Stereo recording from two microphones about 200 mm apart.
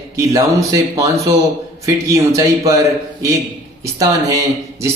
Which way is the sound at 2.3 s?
15° right (ahead or behind).